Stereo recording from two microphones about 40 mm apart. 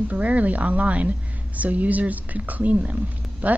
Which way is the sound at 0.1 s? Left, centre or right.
Right.